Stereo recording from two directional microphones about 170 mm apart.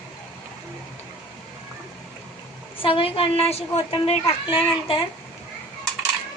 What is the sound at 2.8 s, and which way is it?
Speech, 30° left (ahead or behind).